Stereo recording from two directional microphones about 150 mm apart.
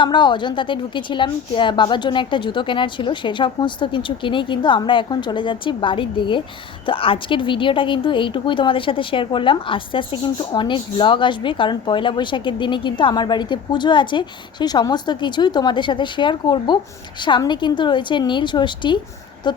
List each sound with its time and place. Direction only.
0.0 s speech: 30° left (ahead or behind)